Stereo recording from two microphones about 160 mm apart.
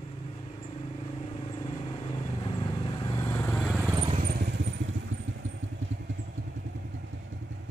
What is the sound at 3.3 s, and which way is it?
Vehicle, 10° left (ahead or behind).